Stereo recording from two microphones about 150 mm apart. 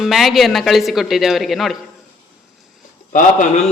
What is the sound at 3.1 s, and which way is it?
Speech, 60° left (ahead or behind).